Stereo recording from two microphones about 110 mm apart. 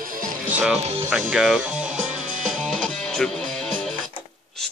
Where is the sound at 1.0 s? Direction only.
5° right (ahead or behind).